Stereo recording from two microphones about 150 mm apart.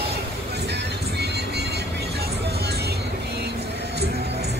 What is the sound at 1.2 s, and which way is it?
Music, 90° right.